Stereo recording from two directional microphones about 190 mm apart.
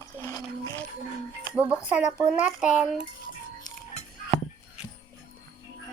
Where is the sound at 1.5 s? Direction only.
10° right (ahead or behind).